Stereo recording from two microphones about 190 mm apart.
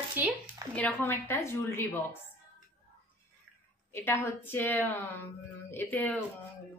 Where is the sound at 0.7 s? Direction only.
10° left (ahead or behind).